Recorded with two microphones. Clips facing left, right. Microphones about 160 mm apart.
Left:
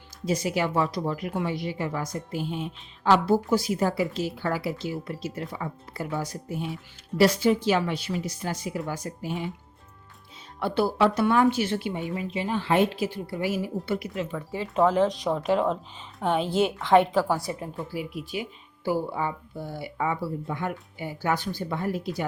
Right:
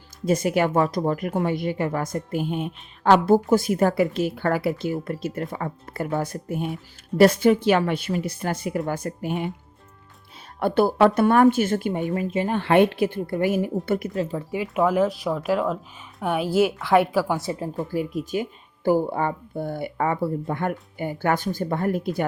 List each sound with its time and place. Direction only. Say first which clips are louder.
0.3 s a woman's voice: right 5 dB; 55° right (ahead or behind)
10.6 s a woman's voice: right 5 dB; 50° right (ahead or behind); by 14.4 s 35° right (ahead or behind)
14.5 s a woman's voice: right 1 dB; 15° right (ahead or behind)
17.3 s speech: right 3 dB; 25° right (ahead or behind)
17.7 s a woman's voice: right 6 dB; 40° right (ahead or behind)